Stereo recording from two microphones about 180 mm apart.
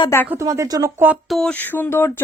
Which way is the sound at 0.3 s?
15° right (ahead or behind).